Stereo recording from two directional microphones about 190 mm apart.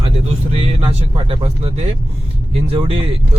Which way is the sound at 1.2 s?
30° right (ahead or behind).